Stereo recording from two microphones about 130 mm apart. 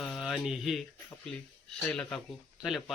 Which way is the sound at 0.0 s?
Centre (ahead or behind).